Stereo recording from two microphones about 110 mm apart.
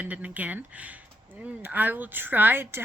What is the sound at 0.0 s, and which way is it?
A woman's voice, 15° right (ahead or behind).